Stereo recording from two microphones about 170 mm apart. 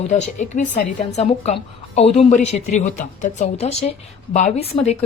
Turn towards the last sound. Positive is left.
turn(degrees=35)  # may be behind; listen again after turning